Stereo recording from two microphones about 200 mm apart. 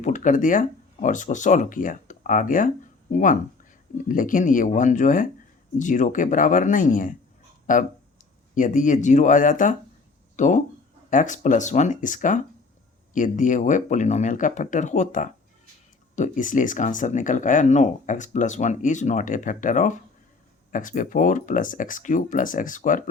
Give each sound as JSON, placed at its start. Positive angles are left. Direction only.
{"t": 0.0, "sound": "speech", "side_deg": 40}